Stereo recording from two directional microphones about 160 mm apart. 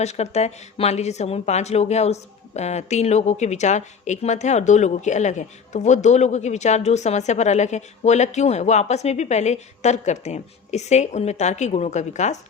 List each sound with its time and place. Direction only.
0.0 s a woman's voice: 45° left (ahead or behind)